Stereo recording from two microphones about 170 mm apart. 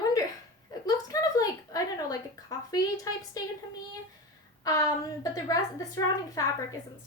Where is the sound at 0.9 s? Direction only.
20° left (ahead or behind).